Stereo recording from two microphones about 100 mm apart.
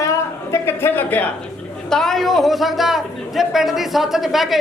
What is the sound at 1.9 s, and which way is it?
A man's voice, 5° left (ahead or behind).